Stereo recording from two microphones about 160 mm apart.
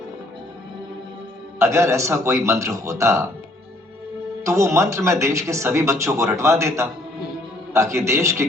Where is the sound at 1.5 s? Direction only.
15° right (ahead or behind).